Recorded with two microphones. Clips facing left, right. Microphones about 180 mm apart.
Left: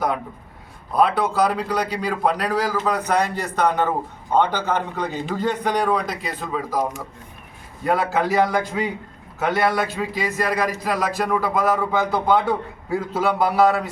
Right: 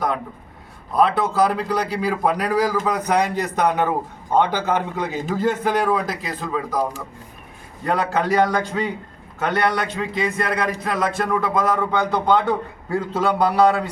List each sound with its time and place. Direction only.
0.9 s a man's voice: centre (ahead or behind)
7.9 s speech: 5° left (ahead or behind)